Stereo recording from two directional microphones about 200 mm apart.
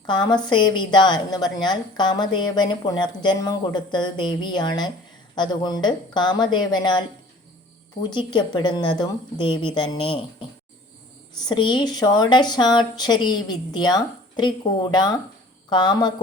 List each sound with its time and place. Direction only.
0.0 s speech: 20° left (ahead or behind)
8.1 s speech: 25° left (ahead or behind)
11.4 s speech: 20° left (ahead or behind)